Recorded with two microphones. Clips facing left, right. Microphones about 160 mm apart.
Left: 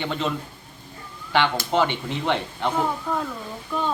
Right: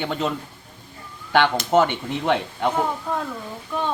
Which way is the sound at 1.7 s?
50° right (ahead or behind).